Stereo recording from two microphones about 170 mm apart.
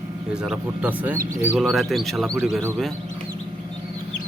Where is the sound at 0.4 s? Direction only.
5° right (ahead or behind).